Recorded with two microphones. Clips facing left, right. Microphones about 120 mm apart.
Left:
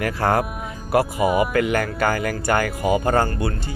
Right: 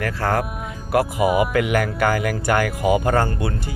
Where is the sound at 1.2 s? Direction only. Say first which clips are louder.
Right 1 dB; 5° right (ahead or behind).